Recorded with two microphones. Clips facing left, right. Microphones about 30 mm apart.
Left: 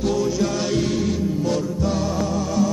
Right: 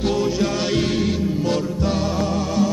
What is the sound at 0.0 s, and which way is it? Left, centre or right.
Music, right.